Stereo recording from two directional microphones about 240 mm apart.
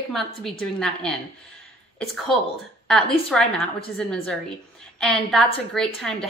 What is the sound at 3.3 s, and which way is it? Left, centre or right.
Speech, centre.